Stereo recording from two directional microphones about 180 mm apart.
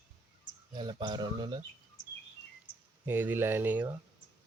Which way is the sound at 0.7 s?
25° right (ahead or behind).